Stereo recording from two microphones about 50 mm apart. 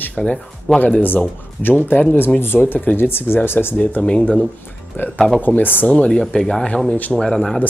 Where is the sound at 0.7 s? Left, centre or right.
Left.